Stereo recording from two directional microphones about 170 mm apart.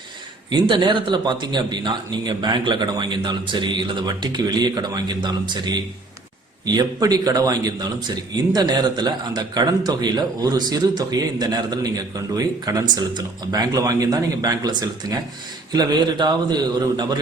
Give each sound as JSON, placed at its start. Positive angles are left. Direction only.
{"t": 0.5, "sound": "a man's voice", "side_deg": -30}